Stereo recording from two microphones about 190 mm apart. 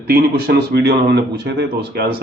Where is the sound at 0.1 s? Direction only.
55° right (ahead or behind).